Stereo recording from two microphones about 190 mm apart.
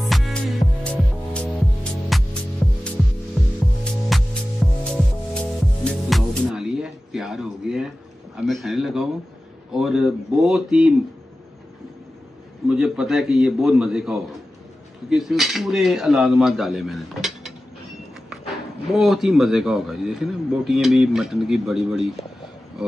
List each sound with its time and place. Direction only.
0.0 s music: centre (ahead or behind)
3.8 s music: 5° left (ahead or behind)
8.4 s speech: centre (ahead or behind)
12.6 s speech: 5° right (ahead or behind)
18.9 s speech: centre (ahead or behind)